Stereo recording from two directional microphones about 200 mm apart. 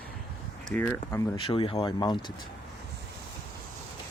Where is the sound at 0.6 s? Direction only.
10° left (ahead or behind).